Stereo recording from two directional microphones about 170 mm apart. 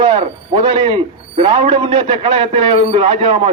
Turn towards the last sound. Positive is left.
turn(degrees=-30)  # may be behind; listen again after turning